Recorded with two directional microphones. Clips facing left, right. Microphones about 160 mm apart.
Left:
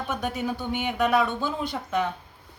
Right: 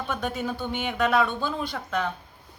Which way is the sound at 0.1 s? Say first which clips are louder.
Left 1 dB; 15° left (ahead or behind).